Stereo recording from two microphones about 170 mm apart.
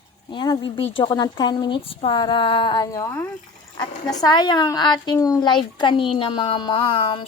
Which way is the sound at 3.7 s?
25° left (ahead or behind).